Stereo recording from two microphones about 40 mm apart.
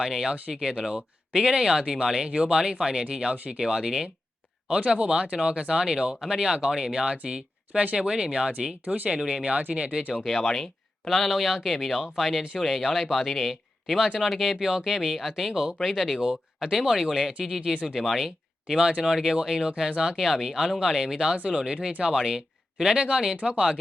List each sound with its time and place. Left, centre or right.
0.0 s speech: centre
4.8 s speech: right
10.2 s speech: centre
14.6 s speech: centre
16.2 s speech: centre
18.7 s speech: centre
20.2 s speech: centre